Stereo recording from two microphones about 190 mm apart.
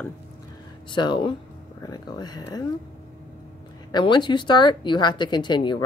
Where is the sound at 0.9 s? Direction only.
25° left (ahead or behind).